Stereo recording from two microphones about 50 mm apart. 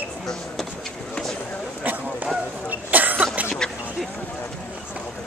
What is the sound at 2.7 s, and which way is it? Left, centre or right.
Cough, right.